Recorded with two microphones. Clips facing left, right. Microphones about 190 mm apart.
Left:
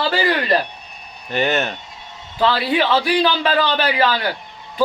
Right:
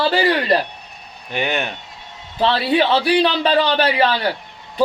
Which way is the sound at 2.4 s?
30° right (ahead or behind).